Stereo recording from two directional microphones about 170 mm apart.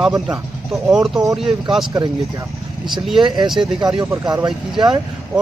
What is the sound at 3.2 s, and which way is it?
Speech, 25° right (ahead or behind).